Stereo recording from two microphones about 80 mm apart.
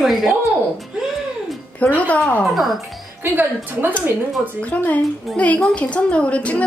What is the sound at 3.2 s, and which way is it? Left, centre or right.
Speech, right.